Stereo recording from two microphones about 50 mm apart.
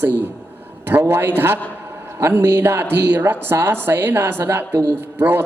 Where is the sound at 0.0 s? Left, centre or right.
Right.